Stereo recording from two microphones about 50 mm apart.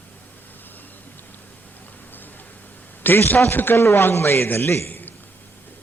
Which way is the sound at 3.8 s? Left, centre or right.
Left.